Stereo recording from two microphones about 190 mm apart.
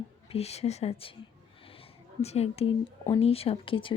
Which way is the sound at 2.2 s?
35° left (ahead or behind).